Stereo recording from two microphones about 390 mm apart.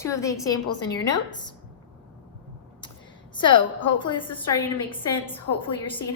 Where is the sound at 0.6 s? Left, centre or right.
Left.